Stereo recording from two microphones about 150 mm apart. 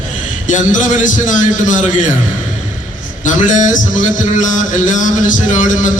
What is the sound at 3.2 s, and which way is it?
A man's voice, 60° left (ahead or behind).